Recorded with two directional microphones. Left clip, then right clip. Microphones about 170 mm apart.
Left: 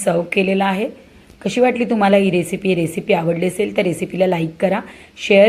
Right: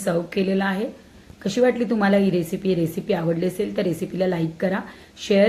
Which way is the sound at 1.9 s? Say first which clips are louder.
Left 6 dB; 10° left (ahead or behind).